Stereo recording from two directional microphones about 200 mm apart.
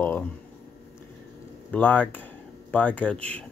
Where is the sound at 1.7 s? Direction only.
10° left (ahead or behind).